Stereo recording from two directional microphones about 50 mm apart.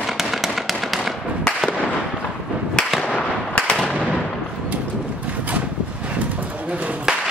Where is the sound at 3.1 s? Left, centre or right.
Left.